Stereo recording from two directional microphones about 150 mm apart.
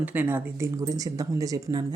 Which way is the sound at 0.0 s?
10° right (ahead or behind).